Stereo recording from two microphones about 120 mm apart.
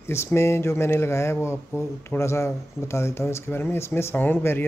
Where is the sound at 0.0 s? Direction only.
20° left (ahead or behind).